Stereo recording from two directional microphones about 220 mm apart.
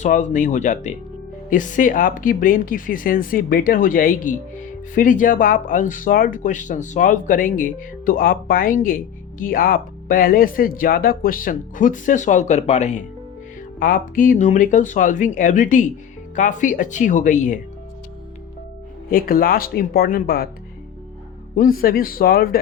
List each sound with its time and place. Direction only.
0.0 s speech: 35° left (ahead or behind)
19.1 s speech: 40° left (ahead or behind)
21.5 s speech: 40° left (ahead or behind)